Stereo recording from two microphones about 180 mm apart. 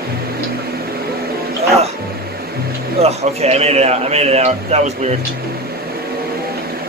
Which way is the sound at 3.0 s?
35° right (ahead or behind).